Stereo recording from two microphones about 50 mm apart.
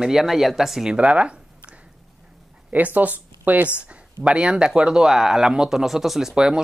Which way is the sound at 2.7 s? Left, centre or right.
Right.